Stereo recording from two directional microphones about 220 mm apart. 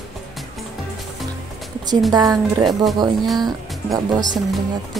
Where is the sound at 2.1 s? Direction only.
20° right (ahead or behind).